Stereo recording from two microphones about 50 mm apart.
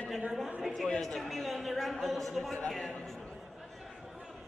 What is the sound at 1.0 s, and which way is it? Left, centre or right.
A man's voice, centre.